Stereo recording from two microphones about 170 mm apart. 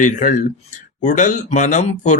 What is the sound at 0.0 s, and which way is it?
Speech, 45° left (ahead or behind).